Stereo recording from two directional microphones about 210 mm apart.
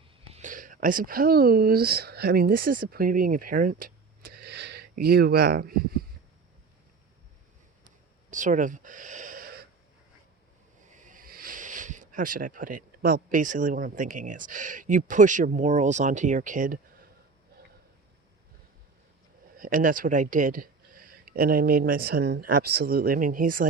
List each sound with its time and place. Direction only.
0.3 s speech: 35° right (ahead or behind)
8.3 s a sound: 35° right (ahead or behind)
10.9 s speech: 40° right (ahead or behind)
19.5 s speech: 40° right (ahead or behind)